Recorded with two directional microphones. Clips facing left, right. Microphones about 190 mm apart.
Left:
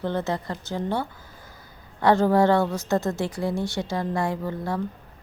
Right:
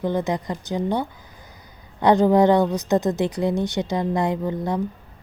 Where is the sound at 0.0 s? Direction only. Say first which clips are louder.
Right 3 dB; 15° right (ahead or behind).